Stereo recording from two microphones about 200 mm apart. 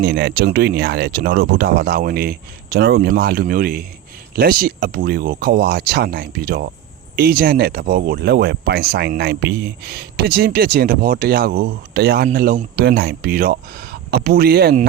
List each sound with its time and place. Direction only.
0.0 s speech: 55° right (ahead or behind)